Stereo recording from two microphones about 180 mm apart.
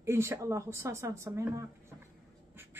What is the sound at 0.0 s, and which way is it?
Speech, 15° right (ahead or behind).